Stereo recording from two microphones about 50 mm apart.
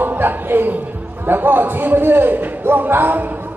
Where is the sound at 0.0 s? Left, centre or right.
Right.